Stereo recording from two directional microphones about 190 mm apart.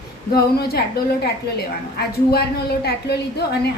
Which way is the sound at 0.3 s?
55° left (ahead or behind).